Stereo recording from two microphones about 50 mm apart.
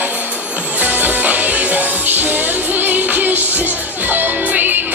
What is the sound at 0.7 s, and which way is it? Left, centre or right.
Music, right.